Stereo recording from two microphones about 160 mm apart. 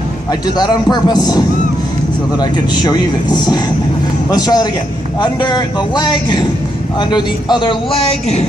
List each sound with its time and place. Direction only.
0.6 s a man's voice: 25° left (ahead or behind)
2.7 s a man's voice: 25° left (ahead or behind)